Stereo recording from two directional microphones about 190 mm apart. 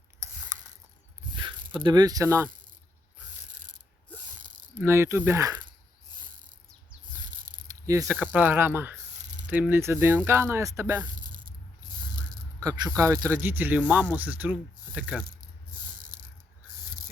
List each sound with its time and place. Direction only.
0.2 s ratchet: 15° right (ahead or behind)
1.4 s speech: 25° right (ahead or behind)
4.8 s speech: 15° right (ahead or behind)
7.7 s speech: 15° right (ahead or behind)
12.5 s speech: 20° right (ahead or behind)
16.0 s a sound: 45° right (ahead or behind)